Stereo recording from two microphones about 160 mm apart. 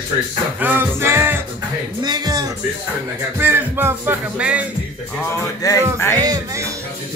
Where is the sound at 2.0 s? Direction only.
25° right (ahead or behind).